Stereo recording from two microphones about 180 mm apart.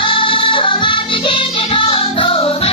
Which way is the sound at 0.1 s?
30° left (ahead or behind).